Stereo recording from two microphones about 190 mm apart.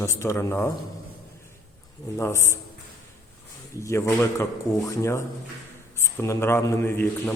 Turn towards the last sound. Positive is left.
turn(degrees=10)  # may be behind; listen again after turning